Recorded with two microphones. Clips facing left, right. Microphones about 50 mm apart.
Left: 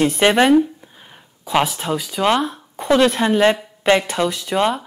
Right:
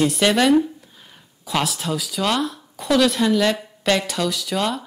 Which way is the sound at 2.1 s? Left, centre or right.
Left.